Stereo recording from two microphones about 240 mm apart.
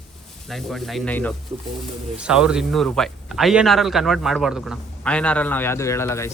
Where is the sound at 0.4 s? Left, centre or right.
Centre.